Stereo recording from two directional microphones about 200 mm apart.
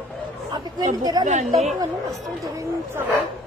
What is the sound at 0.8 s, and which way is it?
Speech, 20° right (ahead or behind).